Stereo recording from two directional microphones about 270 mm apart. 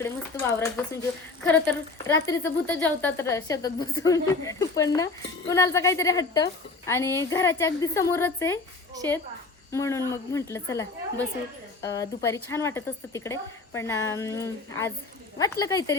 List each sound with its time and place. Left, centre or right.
0.0 s a woman's voice: centre
9.7 s a woman's voice: centre